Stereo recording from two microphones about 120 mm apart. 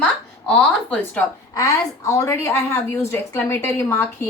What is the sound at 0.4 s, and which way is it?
Speech, 10° left (ahead or behind).